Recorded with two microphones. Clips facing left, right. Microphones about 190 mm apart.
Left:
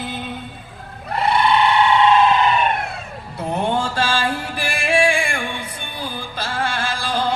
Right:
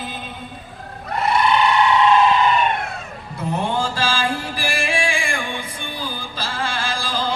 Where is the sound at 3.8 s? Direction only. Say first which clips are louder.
Left 1 dB; 65° left (ahead or behind).